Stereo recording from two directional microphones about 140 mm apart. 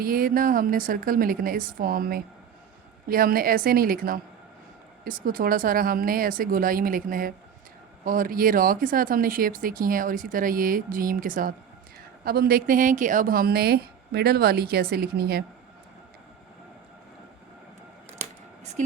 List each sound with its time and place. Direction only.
0.0 s speech: 90° right
12.2 s speech: 90° right